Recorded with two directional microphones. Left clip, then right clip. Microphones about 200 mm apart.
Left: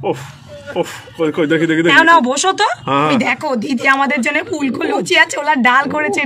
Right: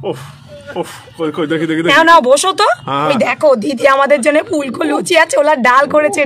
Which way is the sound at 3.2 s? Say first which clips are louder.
Right 6 dB; 75° right (ahead or behind).